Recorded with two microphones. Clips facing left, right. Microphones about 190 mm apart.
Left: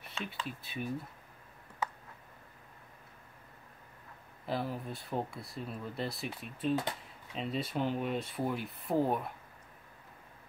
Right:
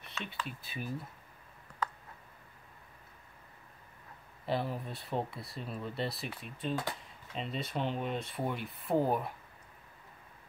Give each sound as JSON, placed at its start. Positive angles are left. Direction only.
{"t": 0.2, "sound": "speech", "side_deg": 30}
{"t": 0.5, "sound": "speech", "side_deg": 0}
{"t": 4.5, "sound": "speech", "side_deg": 0}